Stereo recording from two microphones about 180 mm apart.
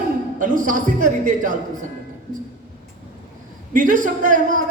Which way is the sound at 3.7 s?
45° right (ahead or behind).